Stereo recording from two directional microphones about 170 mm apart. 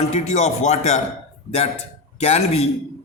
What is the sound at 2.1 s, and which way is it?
Speech, 40° left (ahead or behind).